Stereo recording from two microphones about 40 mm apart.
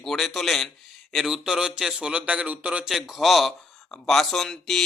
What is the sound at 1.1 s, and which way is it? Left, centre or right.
Speech, centre.